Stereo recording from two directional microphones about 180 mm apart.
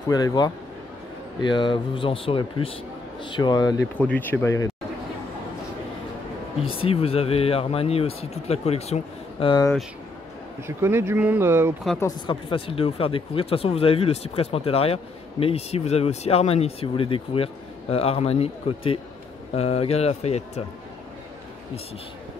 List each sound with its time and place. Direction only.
0.1 s a man's voice: 20° left (ahead or behind)
4.0 s speech: 10° left (ahead or behind)
6.6 s speech: 30° left (ahead or behind)
10.8 s speech: 15° right (ahead or behind)
12.3 s speech: 30° left (ahead or behind)